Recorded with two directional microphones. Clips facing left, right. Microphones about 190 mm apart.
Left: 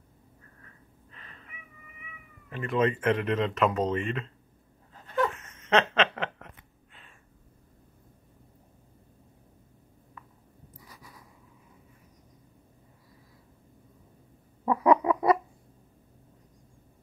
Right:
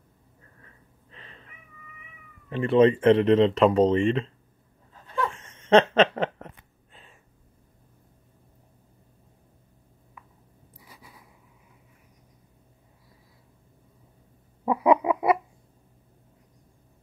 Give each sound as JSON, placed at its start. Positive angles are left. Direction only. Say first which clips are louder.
{"t": 1.1, "sound": "cat", "louder": "right 3 dB", "side_deg": -30}
{"t": 2.5, "sound": "speech", "louder": "right 8 dB", "side_deg": -30}
{"t": 5.3, "sound": "a sound", "louder": "right 7 dB", "side_deg": -30}
{"t": 14.6, "sound": "bird", "louder": "right 1 dB", "side_deg": -10}